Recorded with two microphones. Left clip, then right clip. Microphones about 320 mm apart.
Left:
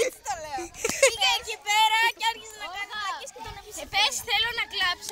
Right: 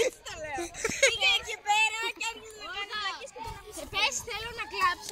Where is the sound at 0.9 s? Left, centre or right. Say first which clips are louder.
Left 2 dB; centre.